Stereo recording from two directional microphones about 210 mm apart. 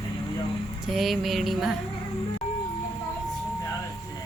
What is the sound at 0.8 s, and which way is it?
Speech, centre (ahead or behind).